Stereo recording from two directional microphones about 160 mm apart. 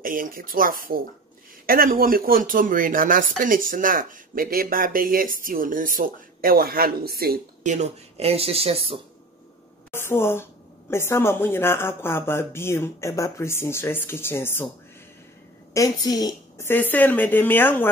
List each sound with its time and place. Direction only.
0.0 s speech: 60° right (ahead or behind)
7.6 s speech: 45° right (ahead or behind)
9.8 s a woman's voice: 15° left (ahead or behind)
15.7 s a woman's voice: 20° left (ahead or behind)
16.9 s a woman's voice: 10° left (ahead or behind)